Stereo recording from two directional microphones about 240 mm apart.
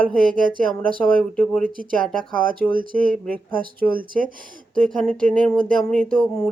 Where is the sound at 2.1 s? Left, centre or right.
Right.